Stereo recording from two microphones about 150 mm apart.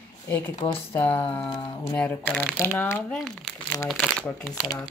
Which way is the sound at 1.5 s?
25° left (ahead or behind).